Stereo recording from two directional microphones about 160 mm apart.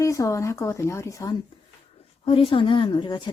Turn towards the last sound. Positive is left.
turn(degrees=30)  # may be behind; listen again after turning